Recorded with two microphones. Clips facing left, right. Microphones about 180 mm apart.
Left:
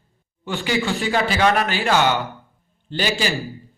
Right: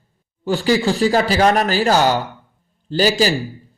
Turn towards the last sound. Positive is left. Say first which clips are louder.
# right 7 dB
turn(degrees=-40)  # may be behind; listen again after turning